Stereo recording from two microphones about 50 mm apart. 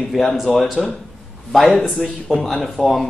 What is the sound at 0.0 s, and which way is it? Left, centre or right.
A man's voice, centre.